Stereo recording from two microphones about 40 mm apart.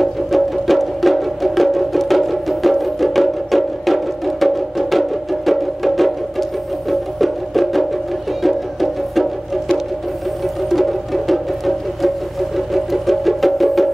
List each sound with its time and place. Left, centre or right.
0.0 s music: centre
10.7 s music: centre